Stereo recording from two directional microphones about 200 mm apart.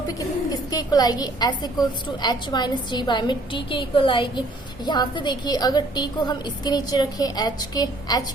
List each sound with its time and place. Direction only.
0.7 s a woman's voice: 20° left (ahead or behind)